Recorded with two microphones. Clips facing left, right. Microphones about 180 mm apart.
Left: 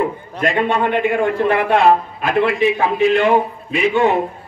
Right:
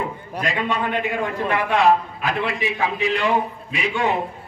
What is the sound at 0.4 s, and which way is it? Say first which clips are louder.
A man's voice: left 7 dB; 55° left (ahead or behind).